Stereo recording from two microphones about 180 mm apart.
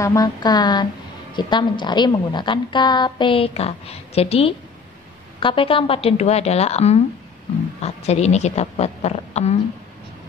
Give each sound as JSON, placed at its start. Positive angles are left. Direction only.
{"t": 0.0, "sound": "a woman's voice", "side_deg": 20}